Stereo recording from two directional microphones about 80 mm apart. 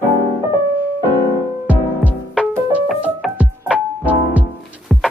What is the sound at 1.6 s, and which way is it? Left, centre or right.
Music, centre.